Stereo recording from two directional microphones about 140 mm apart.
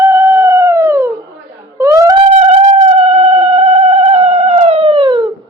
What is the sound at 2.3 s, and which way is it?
Music, 50° right (ahead or behind).